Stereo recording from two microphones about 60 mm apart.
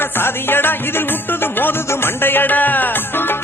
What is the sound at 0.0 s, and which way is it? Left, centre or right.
Music, left.